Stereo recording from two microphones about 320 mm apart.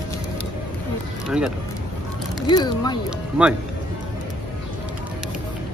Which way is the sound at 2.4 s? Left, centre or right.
Centre.